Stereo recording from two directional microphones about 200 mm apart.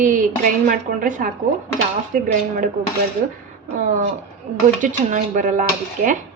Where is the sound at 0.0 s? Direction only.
40° right (ahead or behind).